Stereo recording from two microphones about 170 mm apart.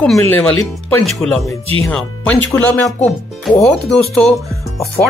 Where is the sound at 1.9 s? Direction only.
5° left (ahead or behind).